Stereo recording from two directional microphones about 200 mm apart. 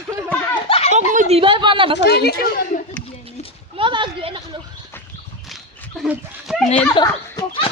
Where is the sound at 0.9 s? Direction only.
35° right (ahead or behind).